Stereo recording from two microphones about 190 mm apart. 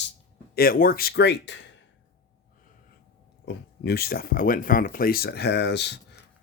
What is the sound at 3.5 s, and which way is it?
Speech, 60° left (ahead or behind).